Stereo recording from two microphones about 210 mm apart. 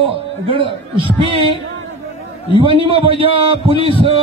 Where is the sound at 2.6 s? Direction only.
25° right (ahead or behind).